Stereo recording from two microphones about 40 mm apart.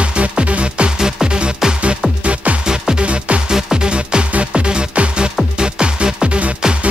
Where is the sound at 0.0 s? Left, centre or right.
Right.